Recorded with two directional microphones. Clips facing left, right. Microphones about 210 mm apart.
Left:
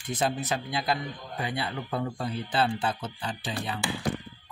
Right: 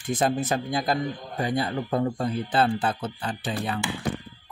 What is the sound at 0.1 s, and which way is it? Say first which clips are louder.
Speech: right 4 dB; 50° right (ahead or behind).